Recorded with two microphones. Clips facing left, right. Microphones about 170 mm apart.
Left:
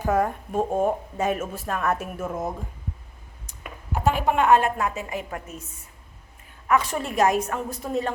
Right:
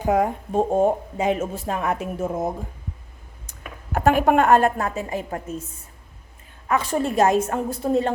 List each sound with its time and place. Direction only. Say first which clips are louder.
0.0 s a woman's voice: right 3 dB; 15° right (ahead or behind)
3.9 s a woman's voice: right 5 dB; 55° right (ahead or behind); by 5.6 s 30° right (ahead or behind)
6.7 s a woman's voice: right 1 dB; 30° right (ahead or behind)